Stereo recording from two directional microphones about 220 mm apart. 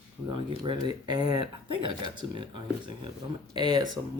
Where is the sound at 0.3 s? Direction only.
20° right (ahead or behind).